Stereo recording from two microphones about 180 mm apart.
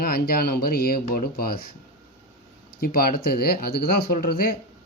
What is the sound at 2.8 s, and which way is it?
Speech, 55° left (ahead or behind).